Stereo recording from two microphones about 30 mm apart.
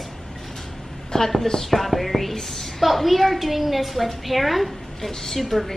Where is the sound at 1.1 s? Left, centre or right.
Centre.